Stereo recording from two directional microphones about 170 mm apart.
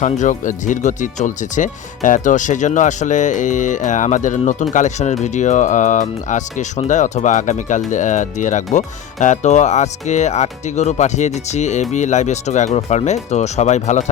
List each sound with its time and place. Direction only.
0.0 s speech: 45° left (ahead or behind)